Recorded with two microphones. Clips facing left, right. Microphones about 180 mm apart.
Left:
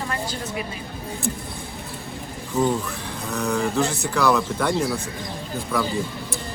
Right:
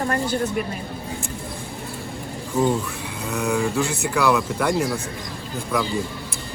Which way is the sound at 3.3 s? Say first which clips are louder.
Right 1 dB; centre (ahead or behind).